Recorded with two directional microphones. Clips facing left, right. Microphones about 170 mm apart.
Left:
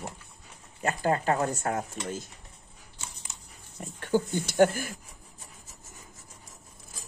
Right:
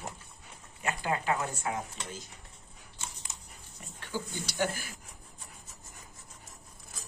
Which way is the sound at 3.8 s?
50° left (ahead or behind).